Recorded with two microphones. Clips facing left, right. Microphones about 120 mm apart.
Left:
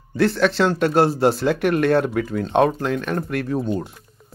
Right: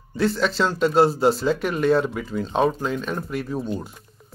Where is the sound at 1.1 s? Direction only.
70° left (ahead or behind).